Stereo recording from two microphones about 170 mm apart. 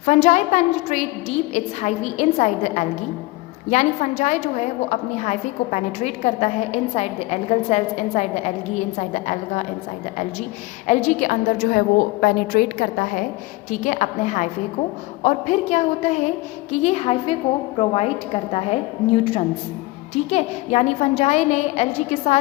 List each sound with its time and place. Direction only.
0.0 s a woman's voice: 45° left (ahead or behind)
10.8 s a woman's voice: 45° left (ahead or behind)
13.7 s a woman's voice: 45° left (ahead or behind)